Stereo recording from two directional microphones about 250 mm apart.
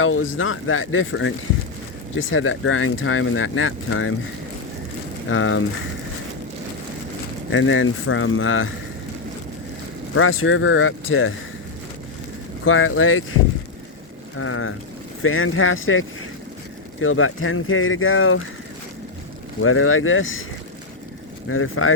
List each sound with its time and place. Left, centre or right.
0.0 s speech: left
5.3 s speech: left
7.5 s speech: left
10.2 s speech: left
12.6 s speech: left
19.6 s speech: left
21.5 s speech: left